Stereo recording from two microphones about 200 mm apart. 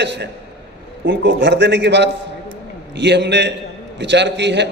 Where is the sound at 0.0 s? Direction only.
60° right (ahead or behind).